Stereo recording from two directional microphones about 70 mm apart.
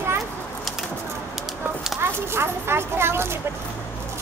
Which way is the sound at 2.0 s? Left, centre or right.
Right.